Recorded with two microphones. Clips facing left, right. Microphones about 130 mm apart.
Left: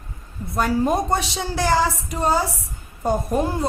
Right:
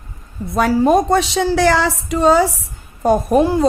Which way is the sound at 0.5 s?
90° right.